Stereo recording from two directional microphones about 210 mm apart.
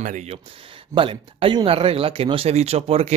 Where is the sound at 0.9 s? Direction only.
25° right (ahead or behind).